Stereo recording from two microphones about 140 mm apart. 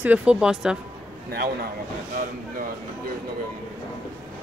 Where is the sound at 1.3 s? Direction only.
90° right.